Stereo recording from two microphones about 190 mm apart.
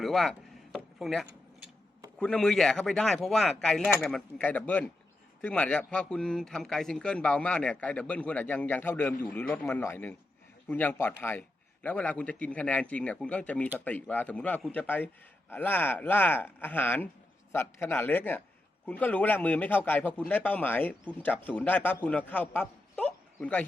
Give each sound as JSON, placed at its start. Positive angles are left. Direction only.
{"t": 0.0, "sound": "a man's voice", "side_deg": 0}